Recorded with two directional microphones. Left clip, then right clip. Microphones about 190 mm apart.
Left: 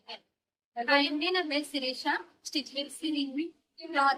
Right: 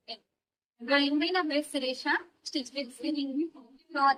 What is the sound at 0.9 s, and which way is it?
A woman's voice, 15° left (ahead or behind).